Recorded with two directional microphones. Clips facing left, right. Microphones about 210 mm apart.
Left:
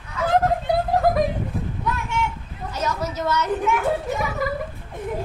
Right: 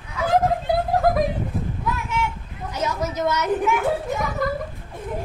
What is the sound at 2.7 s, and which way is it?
Speech, 15° right (ahead or behind).